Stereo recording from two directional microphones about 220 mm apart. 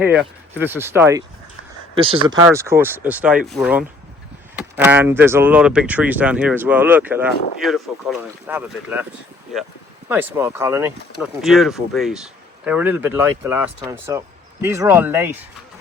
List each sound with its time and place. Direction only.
0.0 s speech: 5° right (ahead or behind)
2.0 s speech: 20° right (ahead or behind)
10.1 s speech: 10° right (ahead or behind)